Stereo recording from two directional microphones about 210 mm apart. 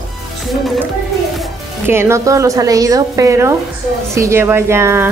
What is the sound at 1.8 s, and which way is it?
A woman's voice, 10° right (ahead or behind).